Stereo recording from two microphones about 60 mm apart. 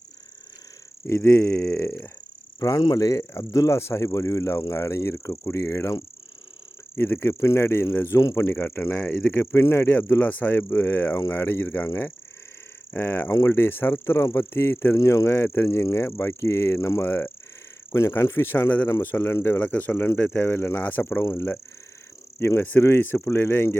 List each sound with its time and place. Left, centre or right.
1.0 s speech: left
2.6 s speech: left
3.5 s speech: left
6.9 s speech: left
8.1 s speech: left
8.4 s speech: left
12.9 s speech: left
15.0 s speech: left
15.3 s speech: left